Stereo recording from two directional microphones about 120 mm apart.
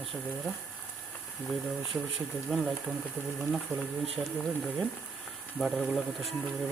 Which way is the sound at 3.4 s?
10° left (ahead or behind).